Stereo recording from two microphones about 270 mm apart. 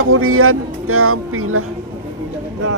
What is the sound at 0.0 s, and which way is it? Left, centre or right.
Speech, right.